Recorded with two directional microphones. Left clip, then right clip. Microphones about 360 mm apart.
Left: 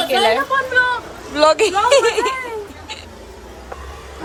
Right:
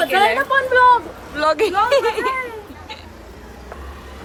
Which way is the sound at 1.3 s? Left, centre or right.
Centre.